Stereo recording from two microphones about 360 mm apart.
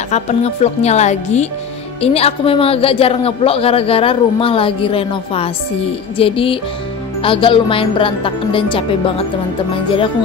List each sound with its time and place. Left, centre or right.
0.1 s a man's voice: centre